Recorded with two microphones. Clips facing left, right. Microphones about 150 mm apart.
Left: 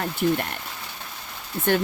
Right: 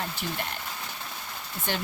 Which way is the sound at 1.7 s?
50° left (ahead or behind).